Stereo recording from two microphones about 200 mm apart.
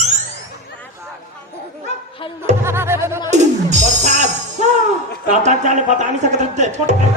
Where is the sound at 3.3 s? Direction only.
35° right (ahead or behind).